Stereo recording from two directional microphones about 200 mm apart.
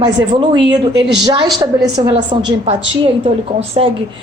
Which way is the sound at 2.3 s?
20° right (ahead or behind).